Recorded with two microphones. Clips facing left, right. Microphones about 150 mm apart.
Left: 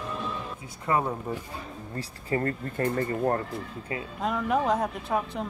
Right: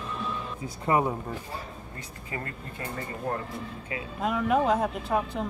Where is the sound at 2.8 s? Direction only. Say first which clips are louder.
Left 9 dB; 55° left (ahead or behind).